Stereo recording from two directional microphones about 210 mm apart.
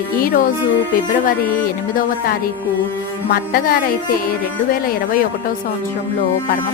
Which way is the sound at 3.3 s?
45° left (ahead or behind).